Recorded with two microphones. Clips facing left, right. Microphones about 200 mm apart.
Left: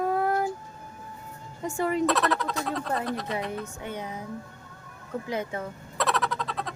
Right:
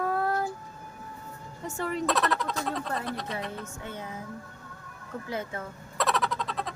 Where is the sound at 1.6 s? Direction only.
10° left (ahead or behind).